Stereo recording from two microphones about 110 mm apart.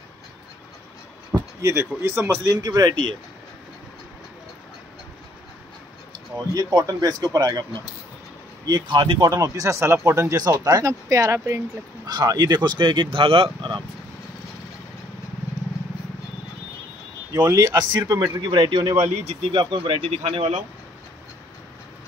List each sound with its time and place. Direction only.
1.6 s speech: 25° right (ahead or behind)
2.5 s speech: 35° right (ahead or behind)
6.5 s speech: 35° right (ahead or behind)
8.6 s speech: 40° right (ahead or behind)
9.2 s speech: 30° right (ahead or behind)
12.1 s speech: 40° right (ahead or behind)
17.3 s speech: 35° right (ahead or behind)
18.6 s speech: 50° right (ahead or behind); by 20.6 s 80° right